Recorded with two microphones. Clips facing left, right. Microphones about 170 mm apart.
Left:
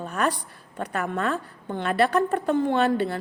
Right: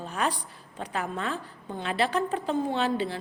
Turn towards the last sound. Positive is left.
turn(degrees=60)  # may be behind; listen again after turning